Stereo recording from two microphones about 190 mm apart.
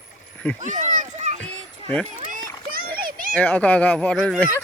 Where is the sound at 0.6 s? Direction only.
40° right (ahead or behind).